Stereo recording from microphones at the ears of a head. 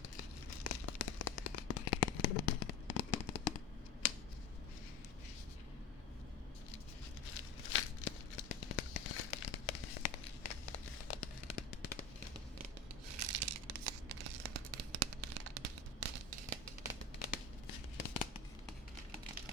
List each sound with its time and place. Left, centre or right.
0.2 s a sound: left
7.3 s tearing: left
13.1 s tearing: right
17.2 s tearing: left